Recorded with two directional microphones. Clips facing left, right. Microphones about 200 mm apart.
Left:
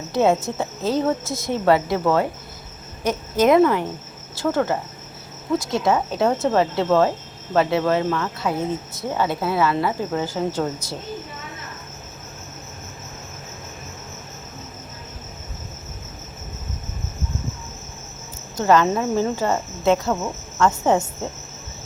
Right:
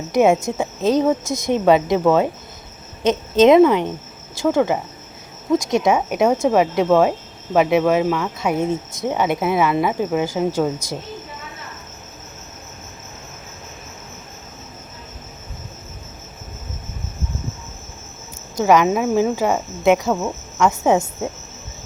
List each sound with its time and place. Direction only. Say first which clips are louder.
0.1 s a woman's voice: right 3 dB; 15° right (ahead or behind)
18.6 s speech: right 2 dB; 10° right (ahead or behind)